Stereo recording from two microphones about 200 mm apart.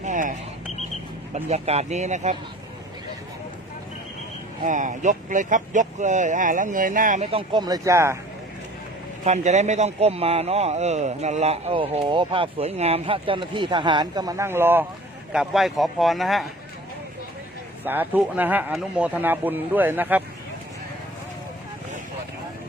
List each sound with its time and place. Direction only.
0.0 s a sound: 40° right (ahead or behind)
1.3 s a man's voice: 35° right (ahead or behind)
4.6 s a man's voice: 40° right (ahead or behind); by 8.2 s 15° right (ahead or behind)
9.2 s a man's voice: 35° right (ahead or behind); by 16.5 s centre (ahead or behind)
17.8 s speech: 10° right (ahead or behind)